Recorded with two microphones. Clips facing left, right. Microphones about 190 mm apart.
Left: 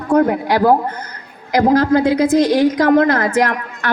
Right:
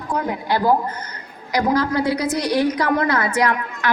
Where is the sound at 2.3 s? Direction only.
90° left.